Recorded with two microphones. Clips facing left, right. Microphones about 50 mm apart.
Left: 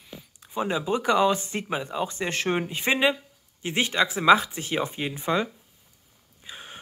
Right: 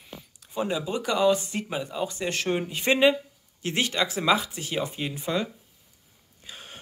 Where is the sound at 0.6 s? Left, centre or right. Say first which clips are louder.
Left 2 dB; left.